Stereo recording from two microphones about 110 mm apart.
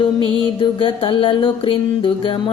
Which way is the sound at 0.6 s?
50° left (ahead or behind).